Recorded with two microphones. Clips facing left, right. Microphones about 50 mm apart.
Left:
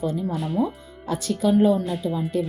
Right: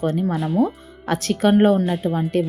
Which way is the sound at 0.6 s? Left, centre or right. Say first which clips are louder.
Right 5 dB; right.